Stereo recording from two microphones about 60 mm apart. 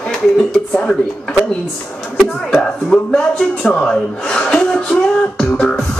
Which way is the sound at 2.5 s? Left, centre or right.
Centre.